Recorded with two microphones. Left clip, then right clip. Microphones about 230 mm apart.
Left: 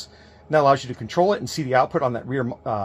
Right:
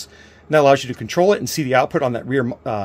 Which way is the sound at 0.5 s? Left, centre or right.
Right.